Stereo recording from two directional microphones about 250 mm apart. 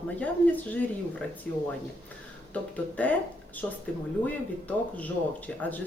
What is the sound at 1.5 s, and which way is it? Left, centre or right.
Speech, centre.